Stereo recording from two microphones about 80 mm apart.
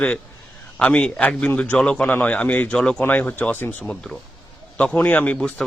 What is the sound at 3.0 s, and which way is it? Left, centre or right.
Speech, left.